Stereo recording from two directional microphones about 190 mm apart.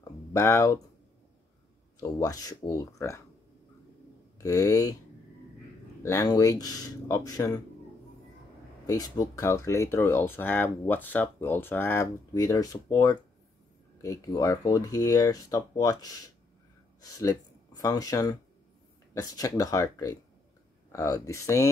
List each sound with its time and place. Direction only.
0.3 s speech: 15° left (ahead or behind)
2.0 s speech: 20° left (ahead or behind)
4.4 s speech: 15° left (ahead or behind)
6.0 s speech: 15° left (ahead or behind)
8.8 s speech: 20° left (ahead or behind)